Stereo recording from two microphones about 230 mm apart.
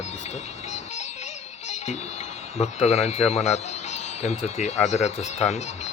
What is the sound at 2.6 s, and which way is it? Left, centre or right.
Speech, left.